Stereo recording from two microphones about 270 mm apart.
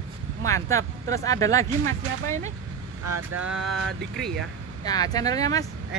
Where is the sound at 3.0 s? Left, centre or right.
Right.